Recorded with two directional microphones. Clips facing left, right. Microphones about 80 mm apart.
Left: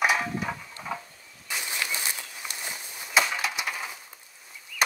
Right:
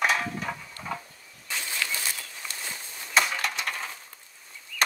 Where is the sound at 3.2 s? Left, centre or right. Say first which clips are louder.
Even; centre.